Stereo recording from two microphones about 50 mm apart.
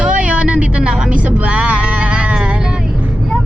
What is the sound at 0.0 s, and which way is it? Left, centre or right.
Music, right.